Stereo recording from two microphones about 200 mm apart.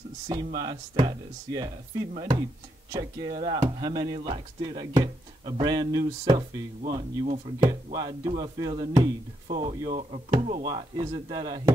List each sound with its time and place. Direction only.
0.6 s speech: 20° right (ahead or behind)
10.7 s speech: 20° right (ahead or behind)